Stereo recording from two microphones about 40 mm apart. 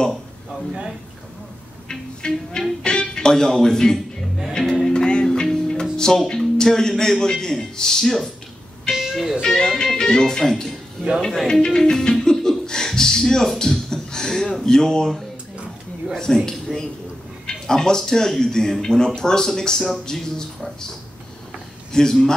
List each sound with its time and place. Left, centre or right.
1.9 s music: centre
2.8 s speech: centre
4.8 s music: centre
7.0 s speech: centre
8.9 s music: centre
9.4 s speech: centre
13.6 s a sound: centre
14.6 s speech: centre
21.9 s speech: centre